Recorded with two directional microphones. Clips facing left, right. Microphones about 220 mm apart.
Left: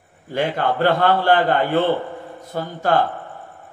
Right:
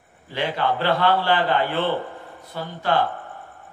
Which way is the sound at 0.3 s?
50° left (ahead or behind).